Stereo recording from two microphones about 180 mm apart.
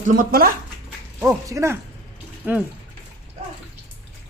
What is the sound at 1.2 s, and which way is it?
Speech, 20° right (ahead or behind).